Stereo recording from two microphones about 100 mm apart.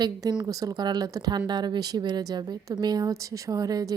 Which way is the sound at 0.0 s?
40° right (ahead or behind).